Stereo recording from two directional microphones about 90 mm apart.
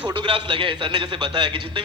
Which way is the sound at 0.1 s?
70° right (ahead or behind).